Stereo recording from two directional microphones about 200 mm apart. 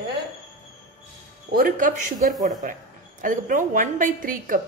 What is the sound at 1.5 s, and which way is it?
A woman's voice, 45° right (ahead or behind).